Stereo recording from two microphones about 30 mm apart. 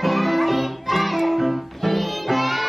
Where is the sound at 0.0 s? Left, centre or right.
Centre.